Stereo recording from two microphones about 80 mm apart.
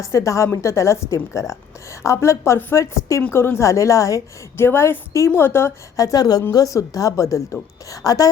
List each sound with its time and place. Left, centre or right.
0.0 s a woman's voice: left
4.5 s a woman's voice: left
6.0 s a woman's voice: left